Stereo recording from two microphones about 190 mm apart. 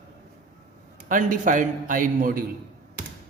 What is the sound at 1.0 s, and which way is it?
A man's voice, 45° right (ahead or behind).